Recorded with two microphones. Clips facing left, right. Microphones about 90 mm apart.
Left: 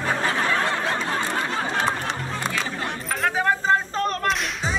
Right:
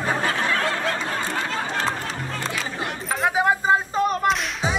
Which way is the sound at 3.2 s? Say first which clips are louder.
Right 2 dB; 15° right (ahead or behind).